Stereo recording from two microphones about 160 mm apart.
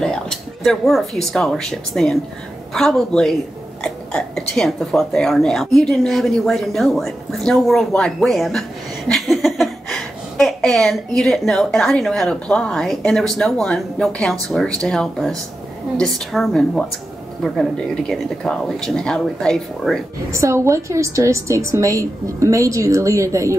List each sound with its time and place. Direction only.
0.0 s speech: 5° left (ahead or behind)
20.2 s a woman's voice: 20° right (ahead or behind)